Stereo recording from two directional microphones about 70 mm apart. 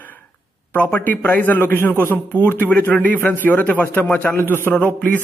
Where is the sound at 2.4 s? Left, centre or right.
Left.